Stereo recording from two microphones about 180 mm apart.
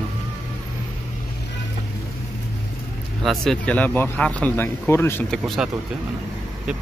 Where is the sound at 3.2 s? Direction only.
Centre (ahead or behind).